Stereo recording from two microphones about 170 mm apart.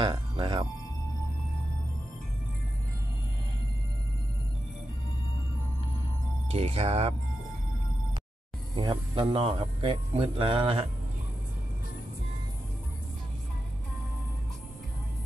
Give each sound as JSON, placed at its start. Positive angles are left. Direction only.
{"t": 0.0, "sound": "speech", "side_deg": -30}
{"t": 6.5, "sound": "speech", "side_deg": -35}
{"t": 8.7, "sound": "speech", "side_deg": -30}